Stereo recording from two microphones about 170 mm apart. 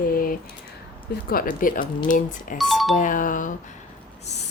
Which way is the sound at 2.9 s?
50° left (ahead or behind).